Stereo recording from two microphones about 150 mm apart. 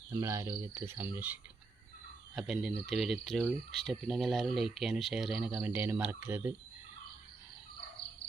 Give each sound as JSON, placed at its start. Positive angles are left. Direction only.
{"t": 0.1, "sound": "cricket", "side_deg": -20}
{"t": 2.3, "sound": "speech", "side_deg": -5}
{"t": 5.6, "sound": "cricket", "side_deg": -15}